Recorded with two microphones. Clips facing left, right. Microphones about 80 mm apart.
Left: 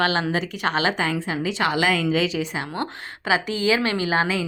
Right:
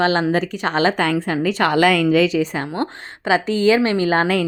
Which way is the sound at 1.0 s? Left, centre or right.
Right.